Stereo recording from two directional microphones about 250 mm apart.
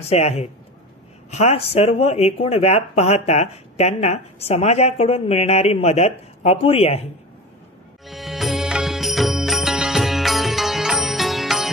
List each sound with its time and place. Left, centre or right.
0.0 s speech: left
8.1 s music: centre